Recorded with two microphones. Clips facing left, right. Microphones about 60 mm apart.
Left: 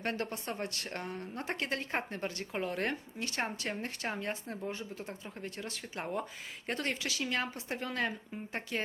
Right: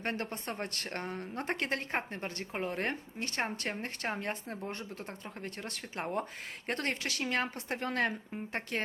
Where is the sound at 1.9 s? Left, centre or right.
Right.